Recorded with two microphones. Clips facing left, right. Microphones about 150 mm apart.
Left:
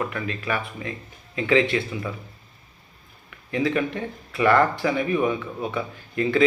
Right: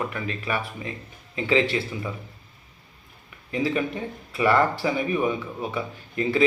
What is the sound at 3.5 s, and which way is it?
Speech, 30° right (ahead or behind).